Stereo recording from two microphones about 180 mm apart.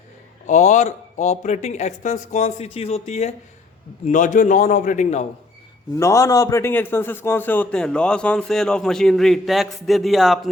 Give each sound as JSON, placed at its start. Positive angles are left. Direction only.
{"t": 0.4, "sound": "a man's voice", "side_deg": 40}
{"t": 6.0, "sound": "a man's voice", "side_deg": 15}